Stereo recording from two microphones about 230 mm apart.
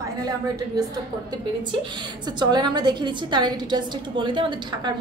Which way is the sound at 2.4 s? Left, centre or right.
Centre.